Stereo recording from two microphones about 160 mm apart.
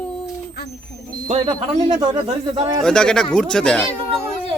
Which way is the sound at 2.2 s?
30° right (ahead or behind).